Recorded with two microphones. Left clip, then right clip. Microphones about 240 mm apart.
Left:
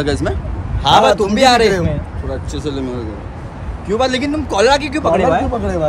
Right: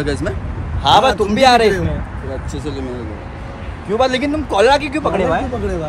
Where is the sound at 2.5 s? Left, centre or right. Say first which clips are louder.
Left 5 dB; centre.